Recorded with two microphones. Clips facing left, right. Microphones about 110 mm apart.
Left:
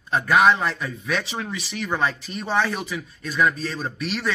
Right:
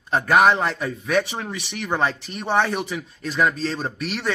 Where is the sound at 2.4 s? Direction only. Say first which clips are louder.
Right 2 dB; 20° right (ahead or behind).